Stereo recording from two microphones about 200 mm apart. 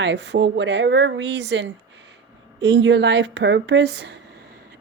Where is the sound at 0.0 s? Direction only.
60° right (ahead or behind).